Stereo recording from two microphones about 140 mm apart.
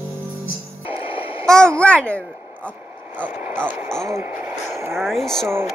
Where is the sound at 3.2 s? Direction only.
15° right (ahead or behind).